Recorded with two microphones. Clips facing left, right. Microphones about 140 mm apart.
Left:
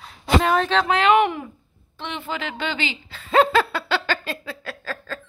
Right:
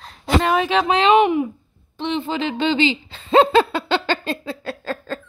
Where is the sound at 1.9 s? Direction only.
20° right (ahead or behind).